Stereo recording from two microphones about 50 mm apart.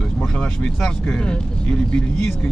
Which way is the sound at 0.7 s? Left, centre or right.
Centre.